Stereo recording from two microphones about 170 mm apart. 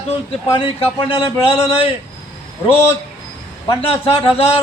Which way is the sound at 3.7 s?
35° left (ahead or behind).